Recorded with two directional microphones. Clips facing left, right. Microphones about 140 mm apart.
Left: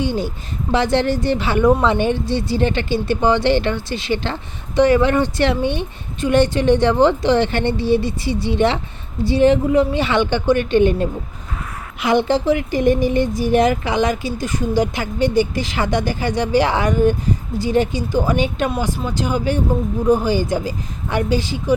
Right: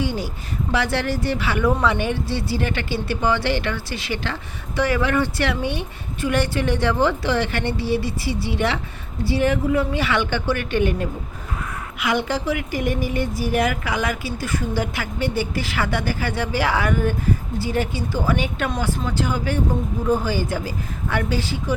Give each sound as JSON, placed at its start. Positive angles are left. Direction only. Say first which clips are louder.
{"t": 0.0, "sound": "speech", "louder": "left 4 dB", "side_deg": 25}
{"t": 18.7, "sound": "speech", "louder": "left 2 dB", "side_deg": 5}